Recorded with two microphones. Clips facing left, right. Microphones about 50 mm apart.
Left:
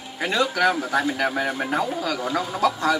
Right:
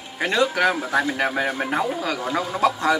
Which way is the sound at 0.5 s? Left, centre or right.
Centre.